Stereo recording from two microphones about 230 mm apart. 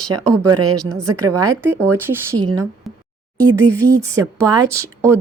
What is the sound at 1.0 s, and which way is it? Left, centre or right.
Speech, centre.